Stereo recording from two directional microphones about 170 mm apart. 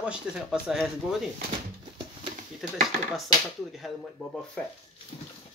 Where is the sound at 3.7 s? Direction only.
Centre (ahead or behind).